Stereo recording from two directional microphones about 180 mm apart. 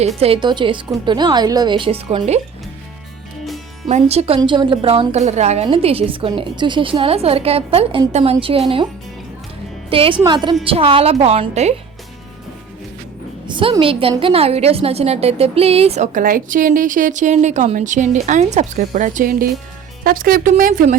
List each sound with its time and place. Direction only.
0.2 s a woman's voice: 30° right (ahead or behind)
3.8 s a woman's voice: 40° right (ahead or behind)
9.9 s a woman's voice: 30° right (ahead or behind)
13.5 s a woman's voice: 30° right (ahead or behind); by 20.9 s 50° right (ahead or behind)